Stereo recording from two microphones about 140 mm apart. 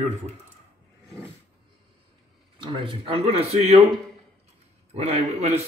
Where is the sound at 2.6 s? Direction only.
35° right (ahead or behind).